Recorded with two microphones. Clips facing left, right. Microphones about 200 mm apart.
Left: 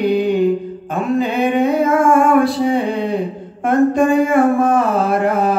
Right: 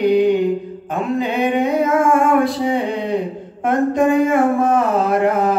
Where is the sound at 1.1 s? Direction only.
15° right (ahead or behind).